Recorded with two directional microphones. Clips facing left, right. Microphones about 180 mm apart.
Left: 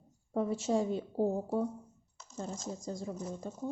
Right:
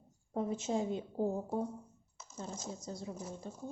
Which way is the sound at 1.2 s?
65° left (ahead or behind).